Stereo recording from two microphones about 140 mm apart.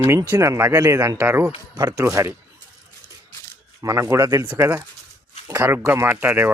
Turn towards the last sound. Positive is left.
turn(degrees=-15)  # may be behind; listen again after turning